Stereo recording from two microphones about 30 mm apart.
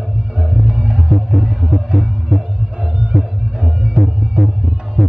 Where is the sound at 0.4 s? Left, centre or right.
Centre.